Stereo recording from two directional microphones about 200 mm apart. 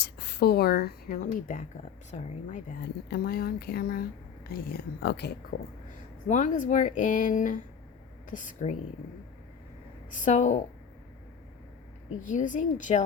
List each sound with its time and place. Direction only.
0.2 s speech: 55° left (ahead or behind); by 2.6 s 35° left (ahead or behind)
3.1 s speech: 50° left (ahead or behind)
6.2 s speech: 40° left (ahead or behind)
10.2 s speech: 35° left (ahead or behind)
12.2 s speech: 40° left (ahead or behind)